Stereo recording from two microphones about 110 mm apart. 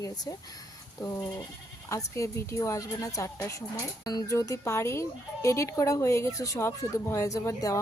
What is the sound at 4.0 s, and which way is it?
Speech, 35° left (ahead or behind).